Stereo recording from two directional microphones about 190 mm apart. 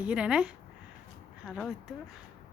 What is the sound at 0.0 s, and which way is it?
Speech, 5° right (ahead or behind).